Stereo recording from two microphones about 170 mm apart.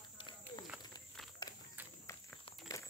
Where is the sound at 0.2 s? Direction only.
25° left (ahead or behind).